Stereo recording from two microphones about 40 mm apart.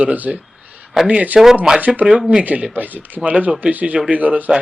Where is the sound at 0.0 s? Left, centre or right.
Right.